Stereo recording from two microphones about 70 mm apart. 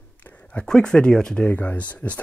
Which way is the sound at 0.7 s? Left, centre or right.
Centre.